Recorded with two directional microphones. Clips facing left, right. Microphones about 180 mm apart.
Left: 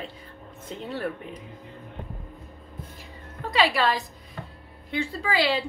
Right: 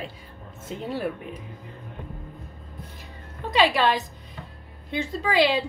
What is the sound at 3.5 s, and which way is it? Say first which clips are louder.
A woman's voice: right 2 dB; 20° right (ahead or behind).